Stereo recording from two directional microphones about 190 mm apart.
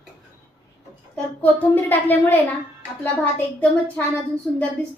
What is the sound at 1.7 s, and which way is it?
A woman's voice, 10° left (ahead or behind).